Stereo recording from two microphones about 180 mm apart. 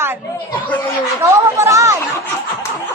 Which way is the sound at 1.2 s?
15° right (ahead or behind).